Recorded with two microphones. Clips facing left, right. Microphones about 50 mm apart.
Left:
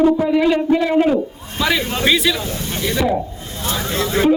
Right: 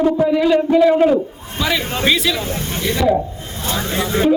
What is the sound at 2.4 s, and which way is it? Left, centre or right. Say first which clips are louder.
Speech: right 1 dB; right.